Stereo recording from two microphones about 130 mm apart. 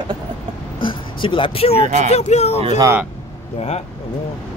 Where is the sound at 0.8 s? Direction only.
40° left (ahead or behind).